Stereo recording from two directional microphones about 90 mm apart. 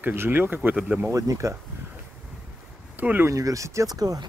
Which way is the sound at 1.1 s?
40° right (ahead or behind).